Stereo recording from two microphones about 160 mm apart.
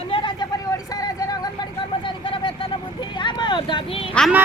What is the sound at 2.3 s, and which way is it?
Vehicle, 30° left (ahead or behind).